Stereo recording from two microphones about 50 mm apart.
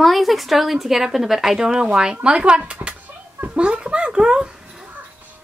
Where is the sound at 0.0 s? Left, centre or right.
Centre.